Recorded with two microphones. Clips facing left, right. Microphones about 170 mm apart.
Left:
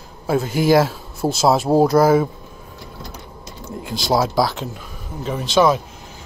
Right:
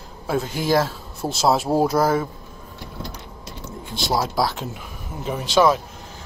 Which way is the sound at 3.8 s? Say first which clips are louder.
Left 3 dB; 90° left.